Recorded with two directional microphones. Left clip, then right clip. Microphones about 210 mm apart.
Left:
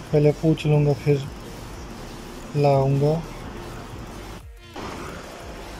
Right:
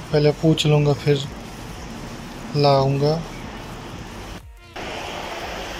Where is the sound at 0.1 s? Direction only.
10° left (ahead or behind).